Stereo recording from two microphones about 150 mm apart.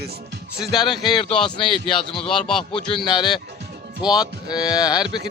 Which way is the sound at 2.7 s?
35° left (ahead or behind).